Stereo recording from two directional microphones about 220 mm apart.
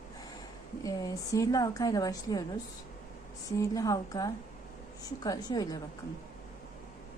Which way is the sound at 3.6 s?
15° left (ahead or behind).